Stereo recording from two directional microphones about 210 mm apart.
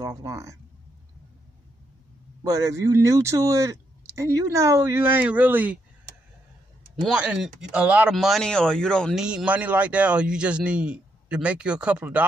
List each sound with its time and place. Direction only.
0.0 s speech: 15° right (ahead or behind)
2.4 s speech: 15° right (ahead or behind)
7.1 s speech: 5° right (ahead or behind)